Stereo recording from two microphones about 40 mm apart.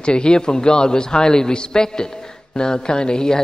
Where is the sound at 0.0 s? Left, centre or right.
Left.